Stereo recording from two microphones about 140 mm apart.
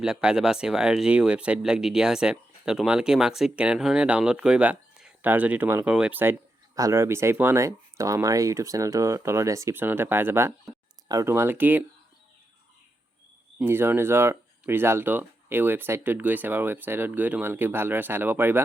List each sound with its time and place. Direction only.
0.0 s speech: 5° right (ahead or behind)
13.6 s speech: 15° right (ahead or behind)